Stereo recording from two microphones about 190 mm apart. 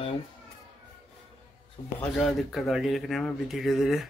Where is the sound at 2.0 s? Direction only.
Centre (ahead or behind).